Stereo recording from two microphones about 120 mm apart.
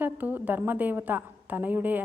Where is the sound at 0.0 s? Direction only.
15° right (ahead or behind).